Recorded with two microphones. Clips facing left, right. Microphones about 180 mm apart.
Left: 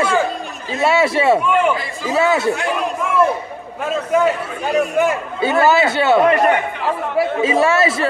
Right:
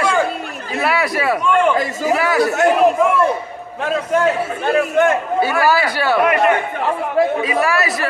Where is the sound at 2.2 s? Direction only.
25° left (ahead or behind).